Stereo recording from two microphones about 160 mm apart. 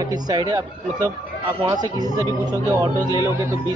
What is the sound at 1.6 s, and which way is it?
Speech, 25° right (ahead or behind).